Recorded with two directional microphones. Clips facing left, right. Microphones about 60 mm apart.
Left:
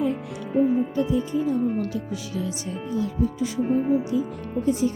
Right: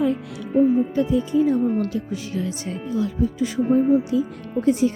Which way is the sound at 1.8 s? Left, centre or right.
Right.